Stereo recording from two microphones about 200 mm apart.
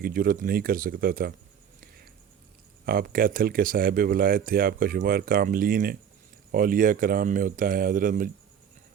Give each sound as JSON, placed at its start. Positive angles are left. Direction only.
{"t": 0.0, "sound": "speech", "side_deg": -45}
{"t": 2.8, "sound": "speech", "side_deg": -45}